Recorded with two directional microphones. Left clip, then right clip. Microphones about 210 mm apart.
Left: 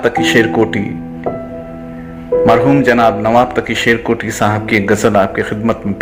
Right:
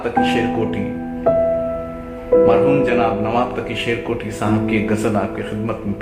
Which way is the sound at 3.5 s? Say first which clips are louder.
Left 8 dB; 35° left (ahead or behind).